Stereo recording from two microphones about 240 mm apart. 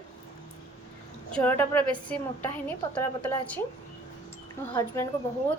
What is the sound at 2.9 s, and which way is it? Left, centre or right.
Speech, centre.